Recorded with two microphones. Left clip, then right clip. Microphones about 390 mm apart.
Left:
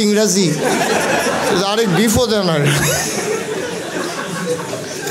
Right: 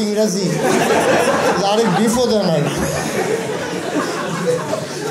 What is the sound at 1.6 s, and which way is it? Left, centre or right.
A man's voice, left.